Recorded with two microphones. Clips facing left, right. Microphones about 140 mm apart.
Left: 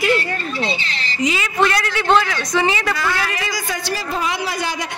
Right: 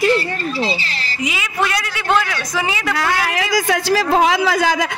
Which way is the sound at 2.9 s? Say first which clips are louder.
Right 3 dB; 85° right.